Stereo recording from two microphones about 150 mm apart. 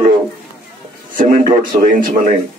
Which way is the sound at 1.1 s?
65° right (ahead or behind).